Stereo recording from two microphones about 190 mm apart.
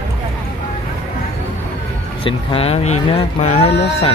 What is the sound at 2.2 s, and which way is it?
Speech, 30° left (ahead or behind).